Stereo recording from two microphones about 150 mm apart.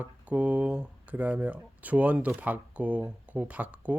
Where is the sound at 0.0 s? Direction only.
10° right (ahead or behind).